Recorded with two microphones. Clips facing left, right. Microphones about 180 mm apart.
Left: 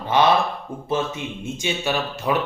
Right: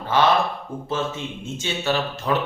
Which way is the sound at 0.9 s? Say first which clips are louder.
Left 2 dB; 15° left (ahead or behind).